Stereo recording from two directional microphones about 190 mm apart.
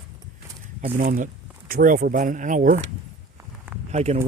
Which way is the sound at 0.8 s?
45° right (ahead or behind).